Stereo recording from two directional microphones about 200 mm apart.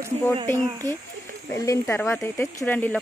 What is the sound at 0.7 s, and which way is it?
Speech, 20° right (ahead or behind).